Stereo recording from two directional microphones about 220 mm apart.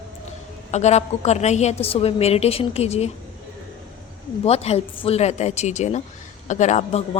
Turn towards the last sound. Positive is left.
turn(degrees=30)  # may be behind; listen again after turning